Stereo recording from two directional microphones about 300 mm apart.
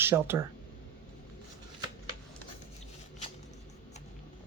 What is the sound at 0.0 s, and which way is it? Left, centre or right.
Speech, centre.